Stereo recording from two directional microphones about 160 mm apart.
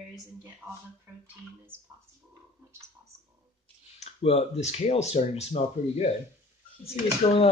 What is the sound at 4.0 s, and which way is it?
Speech, 40° left (ahead or behind).